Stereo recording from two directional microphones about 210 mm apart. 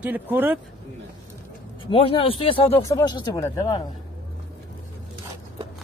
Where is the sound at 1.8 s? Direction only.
25° left (ahead or behind).